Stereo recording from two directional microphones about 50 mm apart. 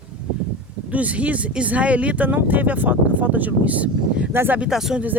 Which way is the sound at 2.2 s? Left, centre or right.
Right.